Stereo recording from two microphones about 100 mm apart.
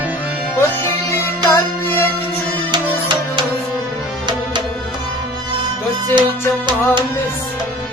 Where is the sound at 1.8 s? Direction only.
20° left (ahead or behind).